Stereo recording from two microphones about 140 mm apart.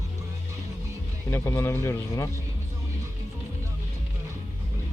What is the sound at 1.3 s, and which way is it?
Speech, 20° left (ahead or behind).